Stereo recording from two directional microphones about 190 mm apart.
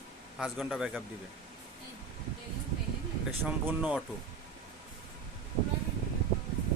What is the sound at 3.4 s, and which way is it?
Speech, 5° right (ahead or behind).